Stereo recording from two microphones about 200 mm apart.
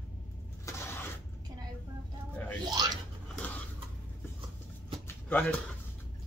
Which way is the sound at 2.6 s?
20° right (ahead or behind).